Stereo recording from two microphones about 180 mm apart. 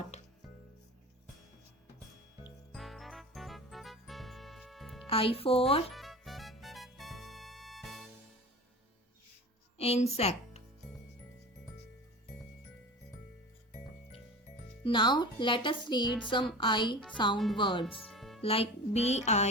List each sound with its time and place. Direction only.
0.1 s music: 40° left (ahead or behind)
2.7 s music: centre (ahead or behind)
5.0 s music: 30° left (ahead or behind)
5.9 s music: centre (ahead or behind)
9.7 s speech: 35° left (ahead or behind)
14.8 s a woman's voice: 25° left (ahead or behind)
17.3 s speech: centre (ahead or behind)
17.6 s a woman's voice: 25° left (ahead or behind)
17.8 s music: centre (ahead or behind)
18.4 s music: 30° left (ahead or behind)